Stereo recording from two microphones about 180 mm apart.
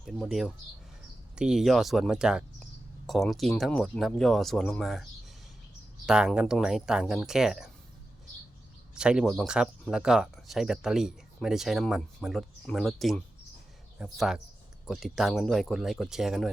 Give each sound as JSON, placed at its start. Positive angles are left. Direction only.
{"t": 0.0, "sound": "speech", "side_deg": 0}
{"t": 6.1, "sound": "speech", "side_deg": -5}
{"t": 9.0, "sound": "speech", "side_deg": -5}